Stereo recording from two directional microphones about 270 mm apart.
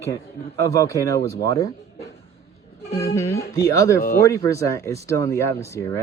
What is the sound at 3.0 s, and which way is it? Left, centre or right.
Speech, centre.